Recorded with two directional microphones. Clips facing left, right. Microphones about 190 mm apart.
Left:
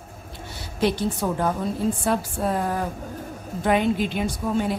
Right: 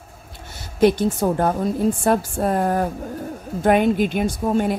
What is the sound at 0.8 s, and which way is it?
Speech, 50° right (ahead or behind).